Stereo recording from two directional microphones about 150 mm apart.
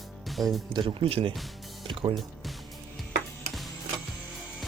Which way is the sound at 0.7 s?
35° right (ahead or behind).